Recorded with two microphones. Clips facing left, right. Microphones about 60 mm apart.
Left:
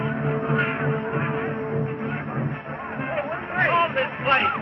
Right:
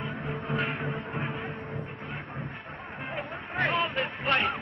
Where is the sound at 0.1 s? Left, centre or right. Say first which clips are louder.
Left 9 dB; left.